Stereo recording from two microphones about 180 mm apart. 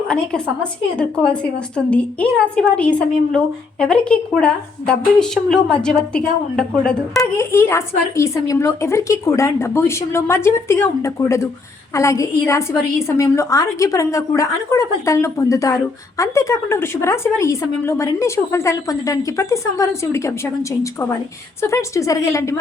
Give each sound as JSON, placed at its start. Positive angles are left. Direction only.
{"t": 0.6, "sound": "a woman's voice", "side_deg": 5}
{"t": 7.3, "sound": "a woman's voice", "side_deg": 15}